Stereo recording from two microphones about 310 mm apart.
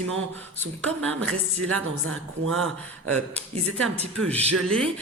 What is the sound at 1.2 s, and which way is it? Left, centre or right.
Speech, right.